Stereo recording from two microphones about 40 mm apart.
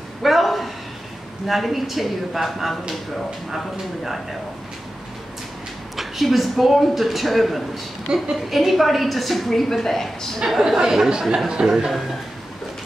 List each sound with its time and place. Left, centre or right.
0.2 s a sound: centre
1.5 s speech: centre
5.9 s speech: centre
8.1 s a woman's voice: right
8.5 s speech: centre
10.7 s speech: centre